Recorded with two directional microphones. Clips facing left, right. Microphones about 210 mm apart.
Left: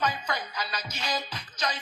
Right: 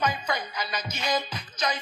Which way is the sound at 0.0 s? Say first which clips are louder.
Right 2 dB; 15° right (ahead or behind).